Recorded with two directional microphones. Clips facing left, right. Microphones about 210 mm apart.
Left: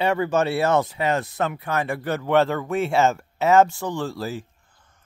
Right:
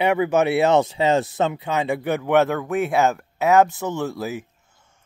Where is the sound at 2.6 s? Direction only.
Centre (ahead or behind).